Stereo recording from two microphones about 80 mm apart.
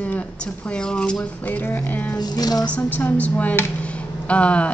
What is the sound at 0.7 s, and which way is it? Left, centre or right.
Speech, centre.